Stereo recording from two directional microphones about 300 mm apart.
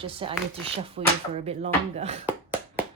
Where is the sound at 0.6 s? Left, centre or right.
Centre.